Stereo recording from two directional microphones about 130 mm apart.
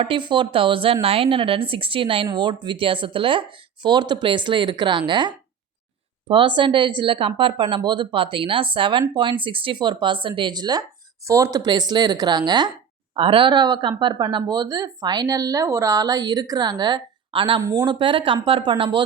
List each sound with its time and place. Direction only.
0.0 s a woman's voice: 40° right (ahead or behind)
17.6 s speech: 25° right (ahead or behind)
18.0 s speech: 40° right (ahead or behind)